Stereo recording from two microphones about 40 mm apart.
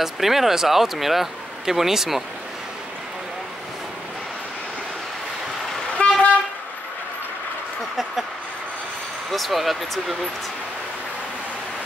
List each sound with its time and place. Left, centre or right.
0.0 s speech: centre
6.0 s vehicle: left
9.3 s speech: centre